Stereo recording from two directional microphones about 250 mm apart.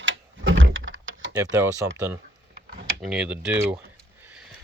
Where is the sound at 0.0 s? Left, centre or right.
Right.